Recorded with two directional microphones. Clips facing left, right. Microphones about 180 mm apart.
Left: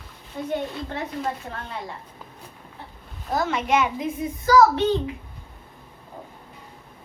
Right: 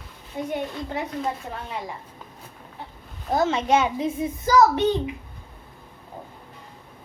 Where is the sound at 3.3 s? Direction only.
25° right (ahead or behind).